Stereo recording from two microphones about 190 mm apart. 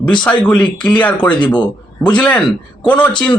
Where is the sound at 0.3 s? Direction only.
5° left (ahead or behind).